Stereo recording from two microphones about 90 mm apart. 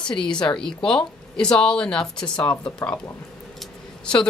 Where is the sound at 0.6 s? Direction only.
5° left (ahead or behind).